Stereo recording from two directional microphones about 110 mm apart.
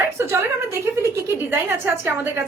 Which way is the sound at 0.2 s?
25° right (ahead or behind).